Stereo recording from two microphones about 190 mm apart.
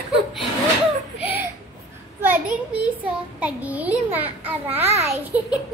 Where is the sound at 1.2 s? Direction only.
10° right (ahead or behind).